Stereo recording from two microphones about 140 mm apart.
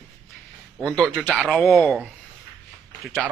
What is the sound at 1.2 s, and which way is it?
Speech, 5° right (ahead or behind).